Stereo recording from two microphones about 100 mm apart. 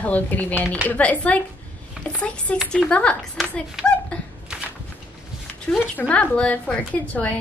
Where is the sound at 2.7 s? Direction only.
10° left (ahead or behind).